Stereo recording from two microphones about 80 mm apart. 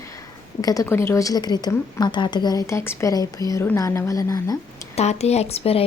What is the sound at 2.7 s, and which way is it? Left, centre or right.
Speech, left.